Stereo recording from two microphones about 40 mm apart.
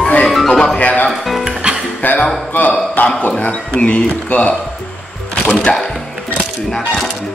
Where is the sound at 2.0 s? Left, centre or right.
Left.